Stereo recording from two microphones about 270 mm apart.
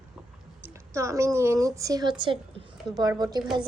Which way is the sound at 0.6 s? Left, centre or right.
Centre.